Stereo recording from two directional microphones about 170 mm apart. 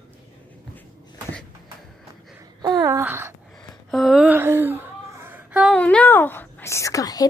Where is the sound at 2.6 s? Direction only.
20° right (ahead or behind).